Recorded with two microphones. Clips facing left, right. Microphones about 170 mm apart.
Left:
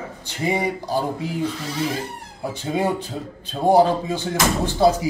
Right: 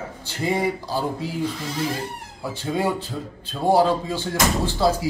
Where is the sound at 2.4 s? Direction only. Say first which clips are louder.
Left 1 dB; 20° left (ahead or behind).